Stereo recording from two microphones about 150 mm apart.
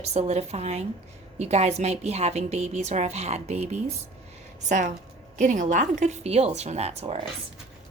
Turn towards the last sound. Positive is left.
turn(degrees=-45)  # may be behind; listen again after turning